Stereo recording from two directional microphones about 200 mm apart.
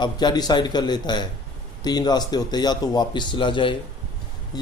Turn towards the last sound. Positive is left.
turn(degrees=20)  # may be behind; listen again after turning